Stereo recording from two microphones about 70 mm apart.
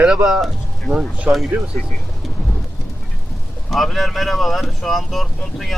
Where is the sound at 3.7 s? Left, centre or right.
Centre.